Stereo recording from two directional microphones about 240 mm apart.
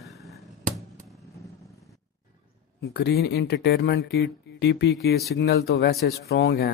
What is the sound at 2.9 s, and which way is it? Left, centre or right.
A man's voice, left.